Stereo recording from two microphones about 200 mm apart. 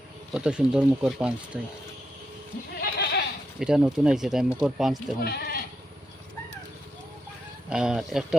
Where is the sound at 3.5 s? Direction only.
5° right (ahead or behind).